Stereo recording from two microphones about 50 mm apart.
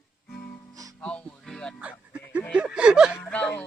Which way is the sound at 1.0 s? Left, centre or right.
Left.